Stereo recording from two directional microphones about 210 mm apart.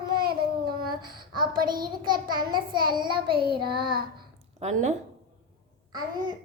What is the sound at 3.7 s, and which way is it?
Child singing, 20° right (ahead or behind).